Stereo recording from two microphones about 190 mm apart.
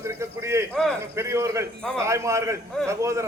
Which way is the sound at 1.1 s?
15° right (ahead or behind).